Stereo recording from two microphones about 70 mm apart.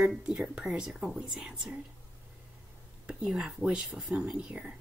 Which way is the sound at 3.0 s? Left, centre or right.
Centre.